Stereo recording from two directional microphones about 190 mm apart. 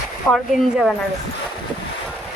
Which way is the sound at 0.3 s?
Centre (ahead or behind).